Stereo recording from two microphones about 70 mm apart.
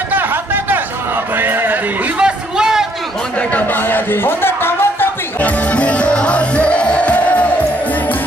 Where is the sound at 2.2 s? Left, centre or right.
Centre.